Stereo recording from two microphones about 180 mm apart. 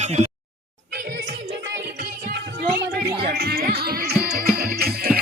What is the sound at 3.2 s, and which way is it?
Music, 60° right (ahead or behind).